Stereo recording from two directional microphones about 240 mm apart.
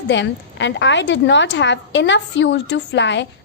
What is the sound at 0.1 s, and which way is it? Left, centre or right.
A woman's voice, left.